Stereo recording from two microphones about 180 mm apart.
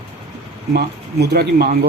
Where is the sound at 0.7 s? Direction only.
60° right (ahead or behind).